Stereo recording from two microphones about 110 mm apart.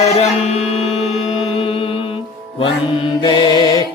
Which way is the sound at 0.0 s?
70° left (ahead or behind).